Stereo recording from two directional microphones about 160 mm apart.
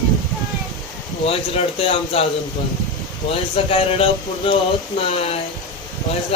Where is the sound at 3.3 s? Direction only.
35° left (ahead or behind).